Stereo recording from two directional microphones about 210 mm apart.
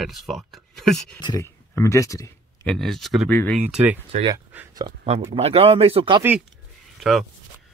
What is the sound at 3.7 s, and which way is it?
Speech, 10° right (ahead or behind).